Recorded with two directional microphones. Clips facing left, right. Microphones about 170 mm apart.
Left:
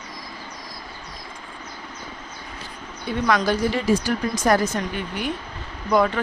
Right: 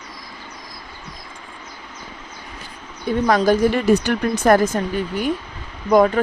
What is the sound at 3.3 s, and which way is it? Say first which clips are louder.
Speech: right 5 dB; 45° right (ahead or behind).